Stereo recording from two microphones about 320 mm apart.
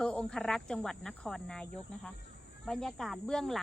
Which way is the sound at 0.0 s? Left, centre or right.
Centre.